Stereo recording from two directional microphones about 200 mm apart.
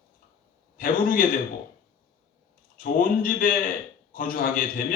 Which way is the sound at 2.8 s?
45° left (ahead or behind).